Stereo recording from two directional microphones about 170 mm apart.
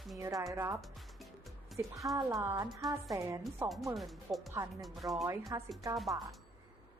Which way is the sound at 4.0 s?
Centre (ahead or behind).